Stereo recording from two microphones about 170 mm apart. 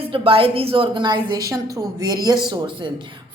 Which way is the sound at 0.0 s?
35° right (ahead or behind).